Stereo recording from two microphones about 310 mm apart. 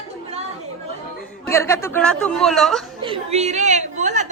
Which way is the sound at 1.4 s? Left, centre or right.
Centre.